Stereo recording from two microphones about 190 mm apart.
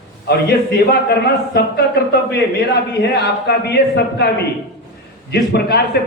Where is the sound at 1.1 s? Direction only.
60° left (ahead or behind).